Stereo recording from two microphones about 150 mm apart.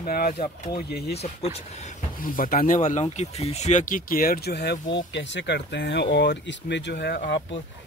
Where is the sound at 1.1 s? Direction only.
45° left (ahead or behind).